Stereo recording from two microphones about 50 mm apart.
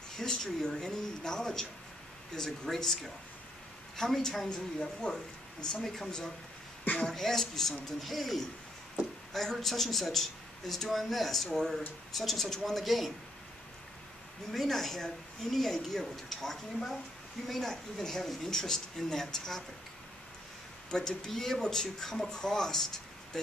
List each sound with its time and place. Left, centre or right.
0.2 s speech: centre
5.8 s a woman's voice: centre
14.5 s a woman's voice: centre
20.9 s speech: centre